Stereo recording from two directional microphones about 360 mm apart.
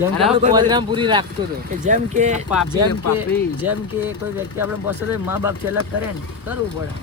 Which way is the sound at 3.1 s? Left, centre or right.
Centre.